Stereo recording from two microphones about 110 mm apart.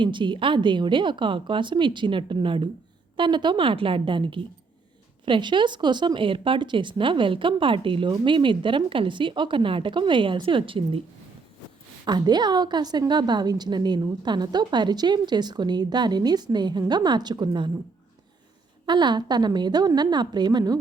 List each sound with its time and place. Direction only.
0.0 s speech: 45° right (ahead or behind)
12.0 s a woman's voice: 40° right (ahead or behind)
18.9 s a woman's voice: 45° right (ahead or behind)